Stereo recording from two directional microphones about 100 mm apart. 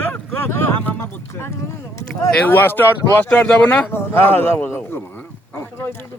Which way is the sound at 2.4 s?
20° left (ahead or behind).